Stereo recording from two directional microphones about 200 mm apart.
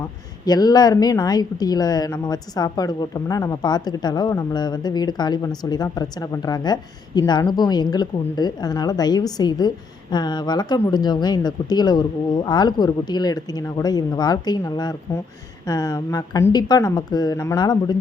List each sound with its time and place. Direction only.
0.4 s a woman's voice: 20° left (ahead or behind)